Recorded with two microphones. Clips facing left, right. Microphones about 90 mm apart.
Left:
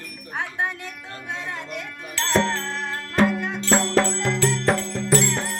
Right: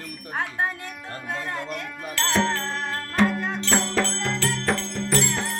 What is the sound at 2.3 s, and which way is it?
Music, centre (ahead or behind).